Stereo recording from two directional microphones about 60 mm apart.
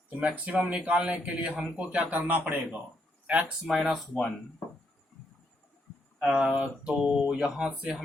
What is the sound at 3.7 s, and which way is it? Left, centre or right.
Speech, centre.